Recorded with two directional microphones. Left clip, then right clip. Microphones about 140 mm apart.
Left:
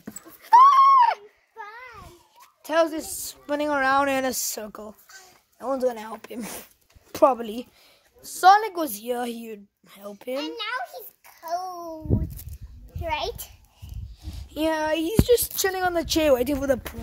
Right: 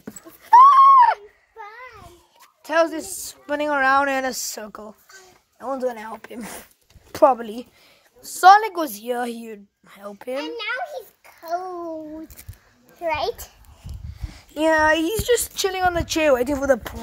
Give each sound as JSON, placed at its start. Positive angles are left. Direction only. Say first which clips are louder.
{"t": 0.5, "sound": "a sound", "louder": "right 4 dB", "side_deg": 20}
{"t": 2.6, "sound": "a woman's voice", "louder": "right 2 dB", "side_deg": 5}
{"t": 4.0, "sound": "a woman's voice", "louder": "right 2 dB", "side_deg": 30}
{"t": 8.2, "sound": "speech", "louder": "right 4 dB", "side_deg": -10}
{"t": 8.8, "sound": "a woman's voice", "louder": "right 3 dB", "side_deg": 0}
{"t": 9.8, "sound": "speech", "louder": "right 2 dB", "side_deg": 15}
{"t": 10.3, "sound": "a sound", "louder": "right 2 dB", "side_deg": 40}
{"t": 11.4, "sound": "a child's voice", "louder": "right 3 dB", "side_deg": 90}
{"t": 13.0, "sound": "a child's voice", "louder": "right 5 dB", "side_deg": 40}
{"t": 14.2, "sound": "a sound", "louder": "right 4 dB", "side_deg": 0}
{"t": 14.7, "sound": "speech", "louder": "right 8 dB", "side_deg": -20}
{"t": 15.5, "sound": "speech", "louder": "right 2 dB", "side_deg": 10}
{"t": 15.9, "sound": "speech", "louder": "right 1 dB", "side_deg": 20}